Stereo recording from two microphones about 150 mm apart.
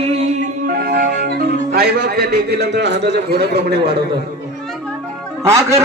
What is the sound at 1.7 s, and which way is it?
Music, 90° right.